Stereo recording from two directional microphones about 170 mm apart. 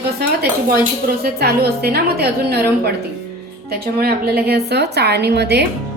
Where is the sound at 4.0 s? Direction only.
65° right (ahead or behind).